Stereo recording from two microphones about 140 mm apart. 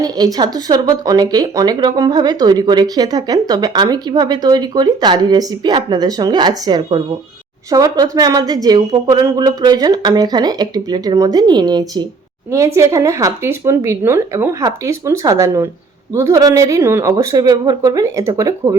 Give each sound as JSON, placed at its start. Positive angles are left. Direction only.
{"t": 0.0, "sound": "speech", "side_deg": -30}